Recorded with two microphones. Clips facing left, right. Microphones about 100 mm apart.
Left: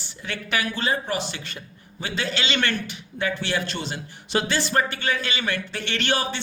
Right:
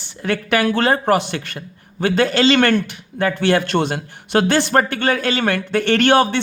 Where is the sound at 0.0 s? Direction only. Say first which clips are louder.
Right 11 dB; 55° right (ahead or behind).